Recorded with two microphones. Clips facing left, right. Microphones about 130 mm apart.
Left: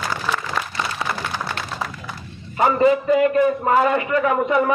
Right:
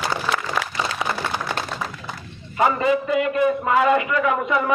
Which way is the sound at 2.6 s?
35° left (ahead or behind).